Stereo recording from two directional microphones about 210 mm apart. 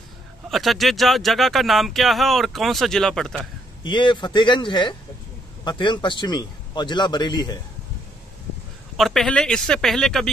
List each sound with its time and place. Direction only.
0.5 s speech: centre (ahead or behind)
3.8 s a man's voice: 20° left (ahead or behind)
8.9 s speech: centre (ahead or behind)